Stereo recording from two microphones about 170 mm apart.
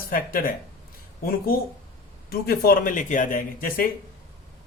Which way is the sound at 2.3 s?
60° left (ahead or behind).